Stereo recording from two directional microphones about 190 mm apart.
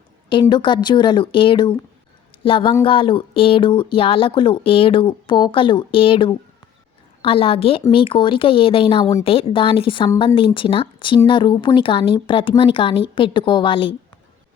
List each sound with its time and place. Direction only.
0.3 s speech: 25° left (ahead or behind)